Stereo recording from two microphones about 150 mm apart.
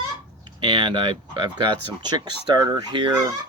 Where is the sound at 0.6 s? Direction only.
30° right (ahead or behind).